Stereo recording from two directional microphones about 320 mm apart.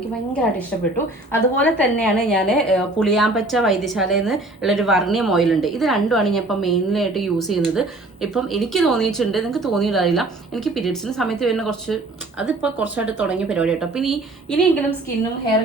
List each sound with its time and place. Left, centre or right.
1.3 s a woman's voice: centre